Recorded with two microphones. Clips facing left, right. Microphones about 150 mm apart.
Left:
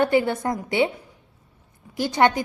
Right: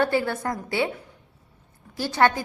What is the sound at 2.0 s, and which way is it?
Speech, 15° left (ahead or behind).